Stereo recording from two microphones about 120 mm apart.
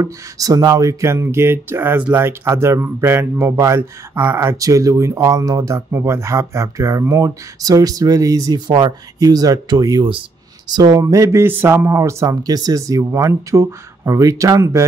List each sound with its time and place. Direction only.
0.0 s speech: 30° right (ahead or behind)